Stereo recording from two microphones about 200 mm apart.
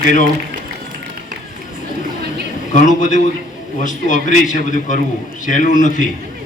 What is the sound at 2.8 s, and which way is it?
A man's voice, 40° left (ahead or behind).